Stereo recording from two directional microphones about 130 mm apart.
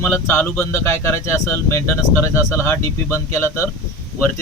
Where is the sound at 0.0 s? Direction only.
15° left (ahead or behind).